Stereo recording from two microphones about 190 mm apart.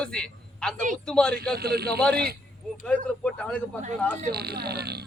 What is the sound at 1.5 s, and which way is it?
Speech, 55° right (ahead or behind).